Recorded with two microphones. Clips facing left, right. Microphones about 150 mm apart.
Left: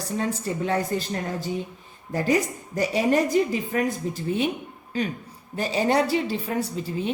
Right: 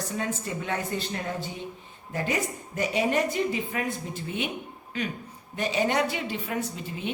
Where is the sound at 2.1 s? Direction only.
35° left (ahead or behind).